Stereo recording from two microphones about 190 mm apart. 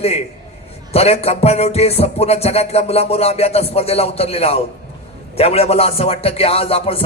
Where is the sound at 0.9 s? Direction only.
35° left (ahead or behind).